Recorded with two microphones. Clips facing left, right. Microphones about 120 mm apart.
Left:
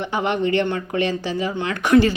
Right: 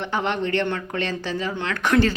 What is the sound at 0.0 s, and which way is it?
Speech, 10° left (ahead or behind).